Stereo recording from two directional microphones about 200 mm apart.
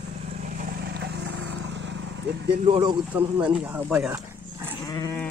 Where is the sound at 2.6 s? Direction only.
25° right (ahead or behind).